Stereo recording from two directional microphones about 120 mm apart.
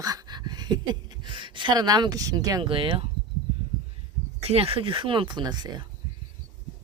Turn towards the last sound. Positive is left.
turn(degrees=-35)  # may be behind; listen again after turning